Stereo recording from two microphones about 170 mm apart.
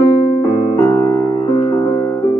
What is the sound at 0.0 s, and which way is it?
Keyboard, 25° left (ahead or behind).